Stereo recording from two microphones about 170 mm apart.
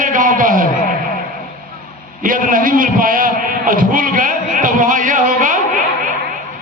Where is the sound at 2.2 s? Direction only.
55° right (ahead or behind).